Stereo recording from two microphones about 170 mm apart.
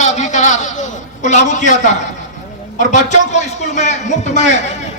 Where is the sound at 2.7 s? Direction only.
45° left (ahead or behind).